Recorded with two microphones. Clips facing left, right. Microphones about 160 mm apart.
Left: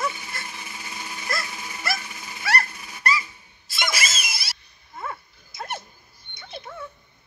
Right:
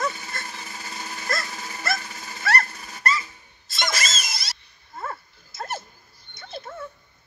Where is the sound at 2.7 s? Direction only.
40° right (ahead or behind).